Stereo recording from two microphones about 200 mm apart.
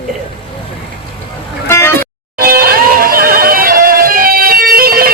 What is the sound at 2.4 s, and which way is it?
Music, 45° right (ahead or behind).